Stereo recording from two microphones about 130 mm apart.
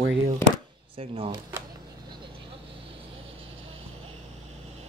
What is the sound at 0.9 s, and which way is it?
Speech, 45° right (ahead or behind).